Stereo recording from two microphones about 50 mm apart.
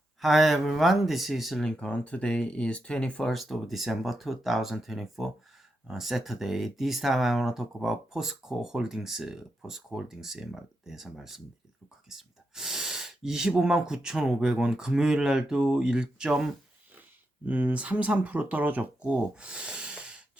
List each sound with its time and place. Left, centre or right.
0.2 s speech: centre
1.6 s speech: left
3.2 s speech: centre
12.0 s gasp: centre
13.6 s speech: centre
17.4 s speech: right
19.0 s a sound: right